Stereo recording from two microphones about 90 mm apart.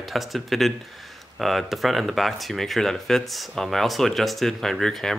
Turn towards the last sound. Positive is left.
turn(degrees=5)  # may be behind; listen again after turning